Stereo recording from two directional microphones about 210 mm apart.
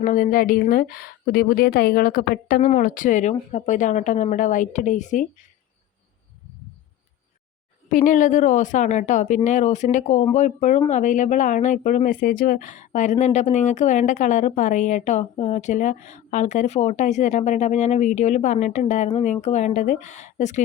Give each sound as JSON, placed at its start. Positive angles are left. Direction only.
{"t": 0.0, "sound": "a woman's voice", "side_deg": 40}
{"t": 7.9, "sound": "speech", "side_deg": 40}